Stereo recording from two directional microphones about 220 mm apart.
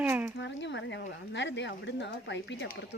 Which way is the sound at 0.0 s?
10° right (ahead or behind).